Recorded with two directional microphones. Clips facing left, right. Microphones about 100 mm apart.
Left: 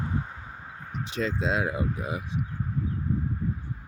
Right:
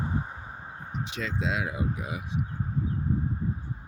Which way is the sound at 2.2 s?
30° right (ahead or behind).